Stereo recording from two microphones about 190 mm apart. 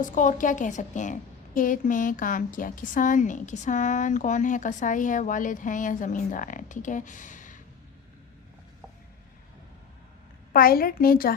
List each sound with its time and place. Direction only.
0.0 s a woman's voice: 40° left (ahead or behind)
10.5 s a woman's voice: 50° left (ahead or behind)